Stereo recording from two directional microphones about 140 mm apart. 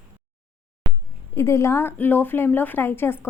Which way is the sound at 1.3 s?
20° left (ahead or behind).